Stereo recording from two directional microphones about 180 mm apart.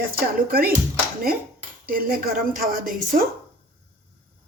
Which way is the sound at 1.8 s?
55° right (ahead or behind).